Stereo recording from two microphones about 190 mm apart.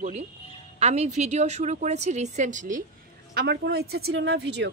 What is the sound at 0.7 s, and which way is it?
A woman's voice, 35° right (ahead or behind).